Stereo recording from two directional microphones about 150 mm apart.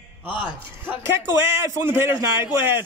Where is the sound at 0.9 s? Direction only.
20° right (ahead or behind).